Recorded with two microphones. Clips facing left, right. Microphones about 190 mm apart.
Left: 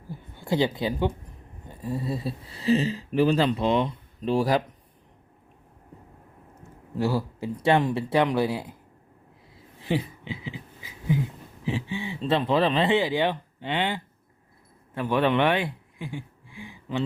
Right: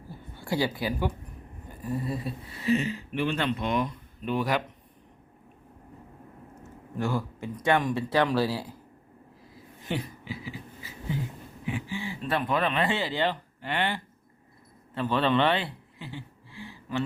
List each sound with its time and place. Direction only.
0.1 s speech: 20° left (ahead or behind)
7.4 s speech: 25° left (ahead or behind)
9.6 s a sound: 25° left (ahead or behind)
11.6 s speech: 20° left (ahead or behind)
12.9 s speech: 15° left (ahead or behind)